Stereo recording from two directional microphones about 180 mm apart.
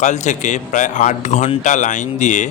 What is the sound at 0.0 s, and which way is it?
A man's voice, 40° left (ahead or behind).